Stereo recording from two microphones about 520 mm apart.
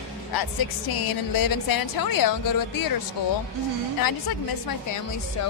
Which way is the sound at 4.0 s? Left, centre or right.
Left.